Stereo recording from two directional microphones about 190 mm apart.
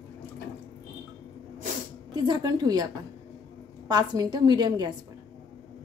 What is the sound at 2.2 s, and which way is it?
A woman's voice, 20° right (ahead or behind).